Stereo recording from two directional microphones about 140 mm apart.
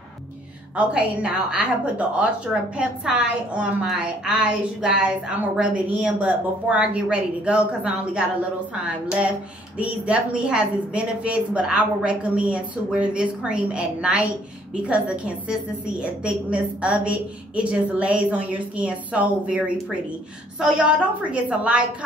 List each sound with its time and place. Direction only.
0.7 s a woman's voice: 5° right (ahead or behind)
9.8 s a woman's voice: 10° right (ahead or behind)